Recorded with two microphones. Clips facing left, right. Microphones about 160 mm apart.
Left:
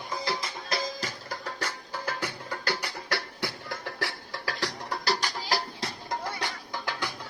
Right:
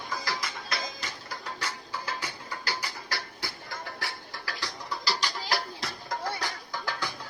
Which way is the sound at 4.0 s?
75° left (ahead or behind).